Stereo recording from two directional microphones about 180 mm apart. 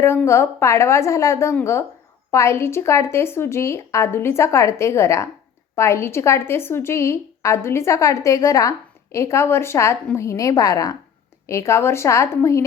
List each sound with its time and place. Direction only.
0.0 s a woman's voice: 15° left (ahead or behind)